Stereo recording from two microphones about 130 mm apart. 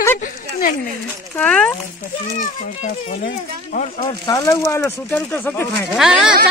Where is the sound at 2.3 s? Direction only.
70° left (ahead or behind).